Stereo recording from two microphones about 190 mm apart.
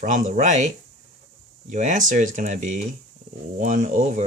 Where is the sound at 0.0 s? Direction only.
40° right (ahead or behind).